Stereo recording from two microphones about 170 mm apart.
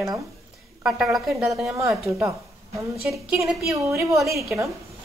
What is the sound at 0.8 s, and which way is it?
Speech, 5° right (ahead or behind).